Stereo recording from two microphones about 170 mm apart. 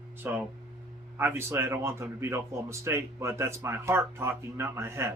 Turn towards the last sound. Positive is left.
turn(degrees=-15)  # may be behind; listen again after turning